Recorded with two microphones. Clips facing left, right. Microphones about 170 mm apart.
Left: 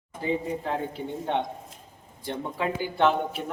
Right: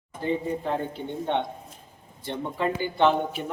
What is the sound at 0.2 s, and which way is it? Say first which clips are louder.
A man's voice: right 1 dB; 5° left (ahead or behind).